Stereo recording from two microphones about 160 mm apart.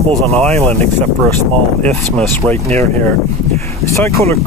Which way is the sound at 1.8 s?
5° left (ahead or behind).